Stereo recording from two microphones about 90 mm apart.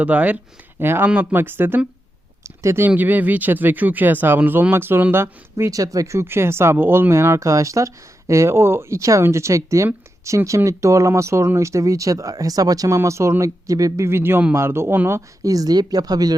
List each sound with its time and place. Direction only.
0.0 s speech: 15° right (ahead or behind)
2.4 s speech: 35° right (ahead or behind)
2.9 s speech: 20° right (ahead or behind)
15.4 s speech: 45° right (ahead or behind)